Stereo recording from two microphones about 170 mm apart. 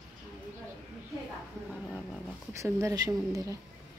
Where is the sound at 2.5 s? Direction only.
15° right (ahead or behind).